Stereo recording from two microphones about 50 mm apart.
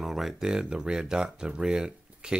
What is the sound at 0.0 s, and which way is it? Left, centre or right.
Speech, centre.